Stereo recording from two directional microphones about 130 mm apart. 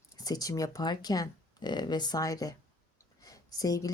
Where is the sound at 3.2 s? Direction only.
30° left (ahead or behind).